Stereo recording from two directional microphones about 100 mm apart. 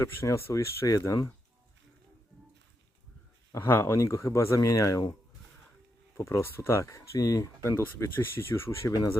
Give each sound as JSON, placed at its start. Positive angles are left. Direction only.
{"t": 0.0, "sound": "speech", "side_deg": 30}
{"t": 3.5, "sound": "speech", "side_deg": 20}
{"t": 6.1, "sound": "speech", "side_deg": 25}
{"t": 7.8, "sound": "speech", "side_deg": 25}